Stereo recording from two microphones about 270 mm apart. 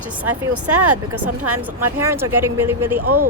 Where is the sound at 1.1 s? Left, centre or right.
Right.